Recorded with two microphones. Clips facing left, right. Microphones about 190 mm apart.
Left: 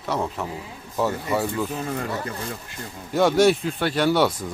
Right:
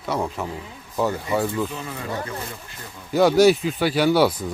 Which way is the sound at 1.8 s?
50° left (ahead or behind).